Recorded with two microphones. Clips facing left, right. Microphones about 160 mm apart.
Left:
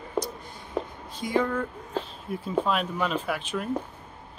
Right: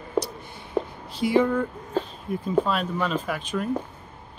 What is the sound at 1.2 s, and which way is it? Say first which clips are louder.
Speech: right 5 dB; 10° right (ahead or behind).